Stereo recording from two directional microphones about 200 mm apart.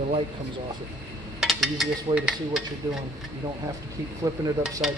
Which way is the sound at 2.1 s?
5° right (ahead or behind).